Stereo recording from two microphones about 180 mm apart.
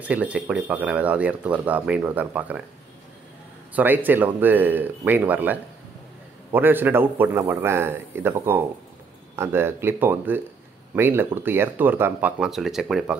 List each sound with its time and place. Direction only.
0.0 s speech: 10° right (ahead or behind)
3.7 s speech: 10° right (ahead or behind)